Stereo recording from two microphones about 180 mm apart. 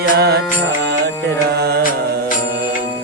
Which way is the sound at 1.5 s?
65° right (ahead or behind).